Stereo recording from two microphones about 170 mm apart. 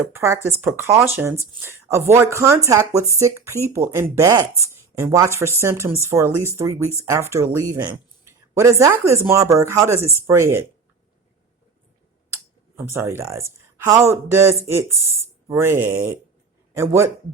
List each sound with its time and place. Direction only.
0.1 s speech: 15° right (ahead or behind)
12.3 s a sound: 15° right (ahead or behind)
13.8 s speech: 15° right (ahead or behind)